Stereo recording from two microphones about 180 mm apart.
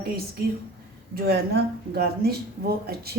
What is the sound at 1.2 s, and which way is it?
Speech, 65° right (ahead or behind).